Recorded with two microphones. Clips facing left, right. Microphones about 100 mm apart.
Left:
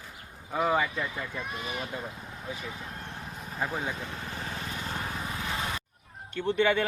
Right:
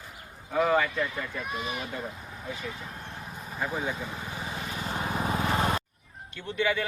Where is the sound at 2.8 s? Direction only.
5° right (ahead or behind).